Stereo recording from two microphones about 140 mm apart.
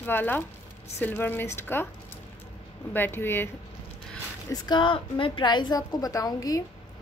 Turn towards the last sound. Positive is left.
turn(degrees=25)  # may be behind; listen again after turning